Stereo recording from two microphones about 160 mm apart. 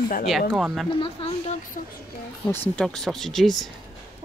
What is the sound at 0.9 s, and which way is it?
Speech, 35° left (ahead or behind).